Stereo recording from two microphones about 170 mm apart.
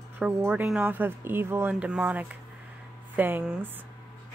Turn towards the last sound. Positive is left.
turn(degrees=-10)  # may be behind; listen again after turning